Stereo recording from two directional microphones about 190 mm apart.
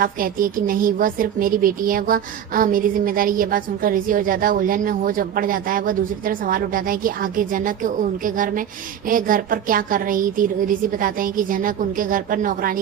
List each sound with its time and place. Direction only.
0.0 s a woman's voice: 45° right (ahead or behind)